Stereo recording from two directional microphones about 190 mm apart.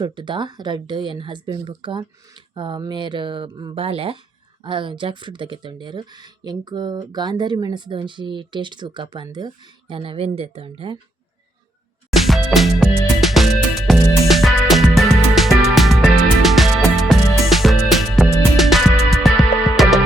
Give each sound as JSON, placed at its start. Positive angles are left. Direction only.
{"t": 0.0, "sound": "speech", "side_deg": -25}
{"t": 12.1, "sound": "music", "side_deg": 0}